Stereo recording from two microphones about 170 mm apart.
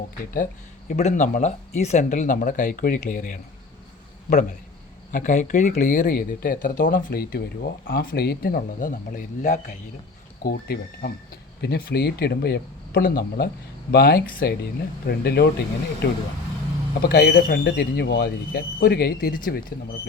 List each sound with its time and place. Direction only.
0.9 s speech: 45° left (ahead or behind)
5.1 s speech: 50° left (ahead or behind)
10.4 s speech: 65° left (ahead or behind)